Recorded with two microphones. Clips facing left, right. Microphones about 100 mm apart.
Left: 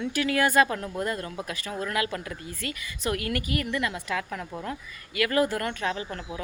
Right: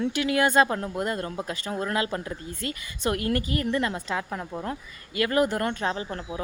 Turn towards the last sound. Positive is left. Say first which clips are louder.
# right 2 dB
turn(degrees=-30)  # may be behind; listen again after turning